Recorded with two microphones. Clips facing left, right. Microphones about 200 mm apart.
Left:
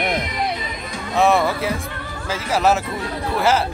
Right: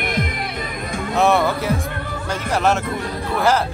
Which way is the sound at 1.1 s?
Centre (ahead or behind).